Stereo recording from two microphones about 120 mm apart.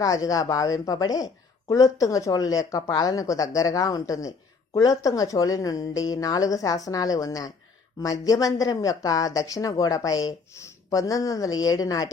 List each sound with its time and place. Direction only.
0.0 s a woman's voice: 30° left (ahead or behind)